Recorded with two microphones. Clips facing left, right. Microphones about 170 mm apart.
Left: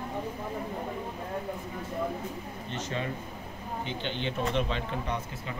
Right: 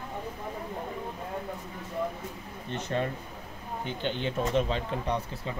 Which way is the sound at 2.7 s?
50° right (ahead or behind).